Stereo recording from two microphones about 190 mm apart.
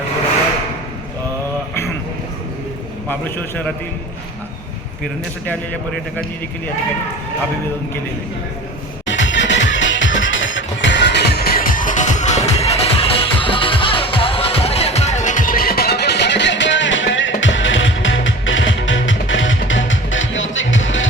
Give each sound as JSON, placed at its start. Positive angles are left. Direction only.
{"t": 3.1, "sound": "a man's voice", "side_deg": 10}
{"t": 9.0, "sound": "music", "side_deg": 75}